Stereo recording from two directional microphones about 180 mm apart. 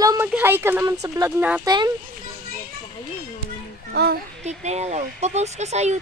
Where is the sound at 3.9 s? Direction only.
60° right (ahead or behind).